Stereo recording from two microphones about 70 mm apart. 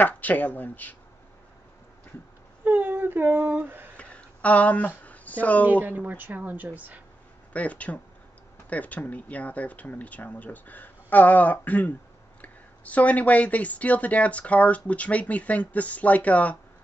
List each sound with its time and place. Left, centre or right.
0.0 s speech: left
2.6 s speech: right
3.9 s a sound: centre
5.7 s speech: right
7.5 s speech: centre